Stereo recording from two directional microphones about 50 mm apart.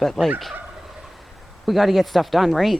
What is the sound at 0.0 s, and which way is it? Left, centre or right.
Speech, centre.